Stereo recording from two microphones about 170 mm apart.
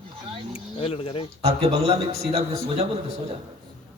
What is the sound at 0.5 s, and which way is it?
Speech, 35° left (ahead or behind).